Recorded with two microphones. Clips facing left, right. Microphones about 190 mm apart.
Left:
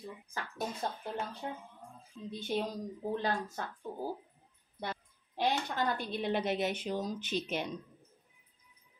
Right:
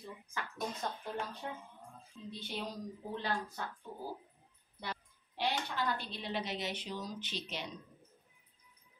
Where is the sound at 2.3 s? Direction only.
45° left (ahead or behind).